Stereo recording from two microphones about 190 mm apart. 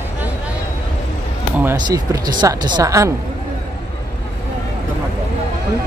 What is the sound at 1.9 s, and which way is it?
A woman's voice, 20° right (ahead or behind).